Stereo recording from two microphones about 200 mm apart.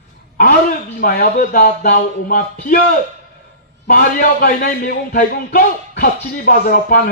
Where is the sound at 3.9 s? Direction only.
50° left (ahead or behind).